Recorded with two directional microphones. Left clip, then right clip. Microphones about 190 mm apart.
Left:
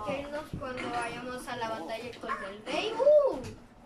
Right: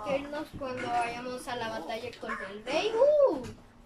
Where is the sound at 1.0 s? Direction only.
15° right (ahead or behind).